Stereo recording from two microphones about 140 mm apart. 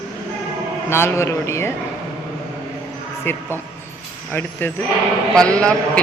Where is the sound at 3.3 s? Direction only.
15° left (ahead or behind).